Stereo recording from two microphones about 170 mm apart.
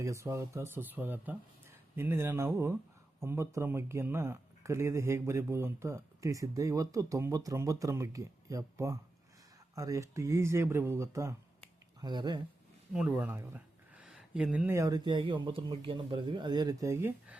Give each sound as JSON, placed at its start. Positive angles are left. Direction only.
{"t": 0.0, "sound": "speech", "side_deg": -15}
{"t": 12.9, "sound": "speech", "side_deg": -5}
{"t": 14.8, "sound": "speech", "side_deg": -20}